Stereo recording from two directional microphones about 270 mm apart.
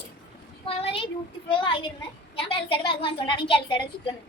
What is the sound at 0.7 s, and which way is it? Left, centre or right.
A woman's voice, left.